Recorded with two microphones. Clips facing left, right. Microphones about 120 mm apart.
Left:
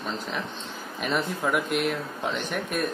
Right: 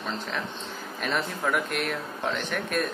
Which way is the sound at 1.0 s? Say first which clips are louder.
Left 2 dB; 5° left (ahead or behind).